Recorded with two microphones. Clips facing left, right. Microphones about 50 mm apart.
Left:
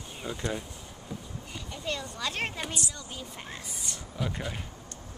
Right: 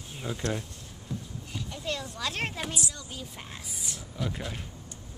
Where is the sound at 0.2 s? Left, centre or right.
Centre.